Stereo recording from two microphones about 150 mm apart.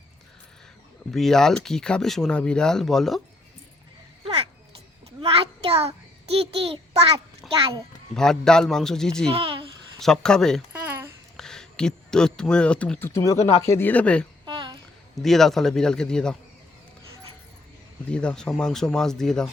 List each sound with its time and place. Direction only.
1.1 s speech: 5° left (ahead or behind)
5.2 s a sound: 40° right (ahead or behind)
6.2 s a child's voice: 40° right (ahead or behind)
8.1 s speech: 5° left (ahead or behind)
9.3 s a child's voice: 35° right (ahead or behind)
10.0 s speech: 5° left (ahead or behind)
10.7 s a sound: 10° right (ahead or behind)
11.3 s speech: 5° left (ahead or behind)
14.4 s a sound: 30° right (ahead or behind)
15.1 s speech: centre (ahead or behind)
18.1 s speech: 5° left (ahead or behind)